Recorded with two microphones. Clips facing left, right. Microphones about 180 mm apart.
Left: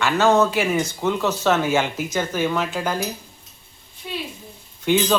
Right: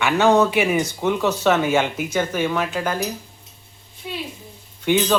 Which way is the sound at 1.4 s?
5° left (ahead or behind).